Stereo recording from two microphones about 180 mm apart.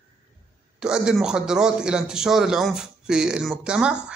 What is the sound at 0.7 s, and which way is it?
A man's voice, 5° right (ahead or behind).